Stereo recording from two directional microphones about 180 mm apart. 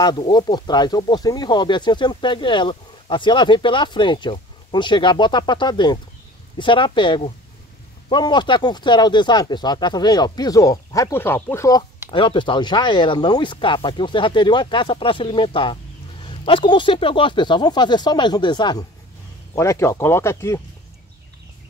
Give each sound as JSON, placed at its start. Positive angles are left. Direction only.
{"t": 0.0, "sound": "speech", "side_deg": 25}
{"t": 12.1, "sound": "speech", "side_deg": 30}